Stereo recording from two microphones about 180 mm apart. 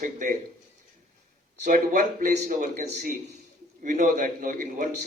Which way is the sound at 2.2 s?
45° right (ahead or behind).